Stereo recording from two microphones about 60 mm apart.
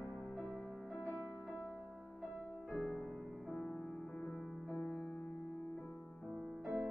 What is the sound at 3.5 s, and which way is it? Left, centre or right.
Music, centre.